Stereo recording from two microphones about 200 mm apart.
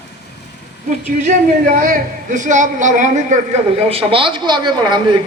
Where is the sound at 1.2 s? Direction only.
40° right (ahead or behind).